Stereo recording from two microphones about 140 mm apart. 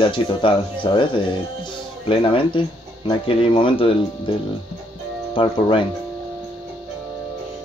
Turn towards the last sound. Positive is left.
turn(degrees=35)  # may be behind; listen again after turning